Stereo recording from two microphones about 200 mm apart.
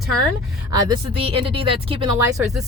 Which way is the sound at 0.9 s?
30° right (ahead or behind).